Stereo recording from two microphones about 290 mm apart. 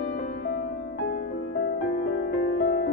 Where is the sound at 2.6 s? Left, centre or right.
Left.